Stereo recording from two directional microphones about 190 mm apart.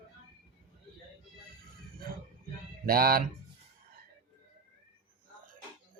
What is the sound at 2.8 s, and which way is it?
Speech, 50° right (ahead or behind).